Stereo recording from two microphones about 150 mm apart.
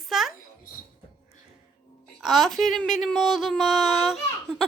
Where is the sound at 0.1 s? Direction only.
Centre (ahead or behind).